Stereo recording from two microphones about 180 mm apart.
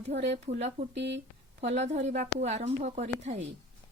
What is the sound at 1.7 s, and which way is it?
Speech, 40° right (ahead or behind).